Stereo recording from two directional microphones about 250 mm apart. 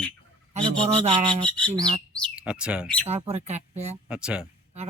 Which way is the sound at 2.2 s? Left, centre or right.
Centre.